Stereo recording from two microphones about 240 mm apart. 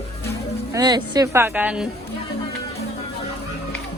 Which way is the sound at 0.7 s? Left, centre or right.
Centre.